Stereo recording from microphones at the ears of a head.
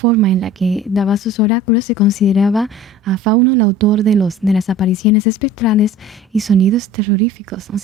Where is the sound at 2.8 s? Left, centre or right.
Right.